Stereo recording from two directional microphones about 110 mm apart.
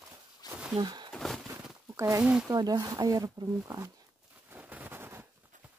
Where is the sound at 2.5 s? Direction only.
35° right (ahead or behind).